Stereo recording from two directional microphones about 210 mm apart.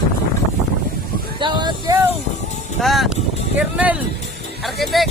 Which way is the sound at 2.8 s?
Centre (ahead or behind).